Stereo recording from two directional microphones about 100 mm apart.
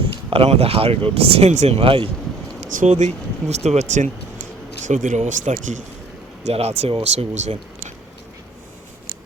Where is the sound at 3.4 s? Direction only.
90° right.